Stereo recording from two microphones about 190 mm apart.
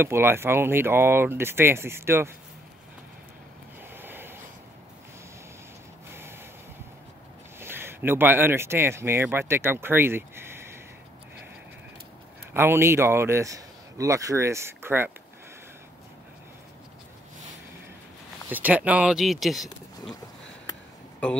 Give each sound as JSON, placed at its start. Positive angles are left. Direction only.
{"t": 0.0, "sound": "speech", "side_deg": -10}
{"t": 3.9, "sound": "a sound", "side_deg": -10}
{"t": 7.6, "sound": "speech", "side_deg": -10}
{"t": 12.5, "sound": "speech", "side_deg": -15}
{"t": 18.5, "sound": "speech", "side_deg": -10}
{"t": 20.7, "sound": "a sound", "side_deg": 20}